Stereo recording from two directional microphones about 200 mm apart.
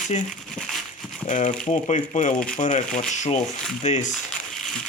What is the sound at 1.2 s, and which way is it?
Speech, 40° left (ahead or behind).